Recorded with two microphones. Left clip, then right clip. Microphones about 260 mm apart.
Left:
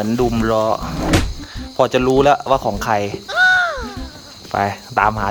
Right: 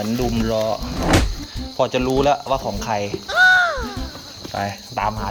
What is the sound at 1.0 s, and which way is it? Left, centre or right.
Cupboard open or close, centre.